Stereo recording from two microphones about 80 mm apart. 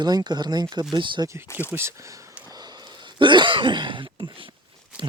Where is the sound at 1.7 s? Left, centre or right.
Right.